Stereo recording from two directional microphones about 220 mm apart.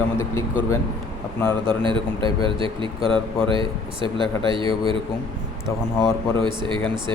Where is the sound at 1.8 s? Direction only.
20° right (ahead or behind).